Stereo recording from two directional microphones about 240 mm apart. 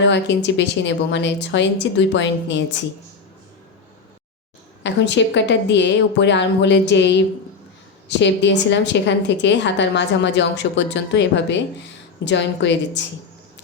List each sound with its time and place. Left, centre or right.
0.1 s a woman's voice: left
4.8 s a woman's voice: left